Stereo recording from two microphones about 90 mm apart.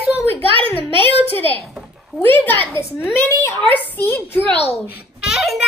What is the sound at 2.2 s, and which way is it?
A child's voice, 20° left (ahead or behind).